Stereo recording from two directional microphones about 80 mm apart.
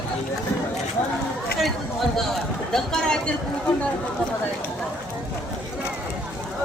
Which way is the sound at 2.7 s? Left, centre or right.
Centre.